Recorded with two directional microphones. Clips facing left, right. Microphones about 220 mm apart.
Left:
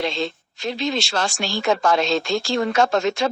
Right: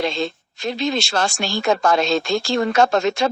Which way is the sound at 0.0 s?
50° right (ahead or behind).